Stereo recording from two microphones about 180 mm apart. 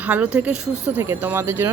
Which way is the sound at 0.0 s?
10° right (ahead or behind).